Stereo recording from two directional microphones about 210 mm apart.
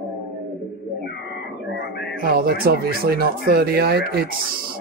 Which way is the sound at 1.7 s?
50° left (ahead or behind).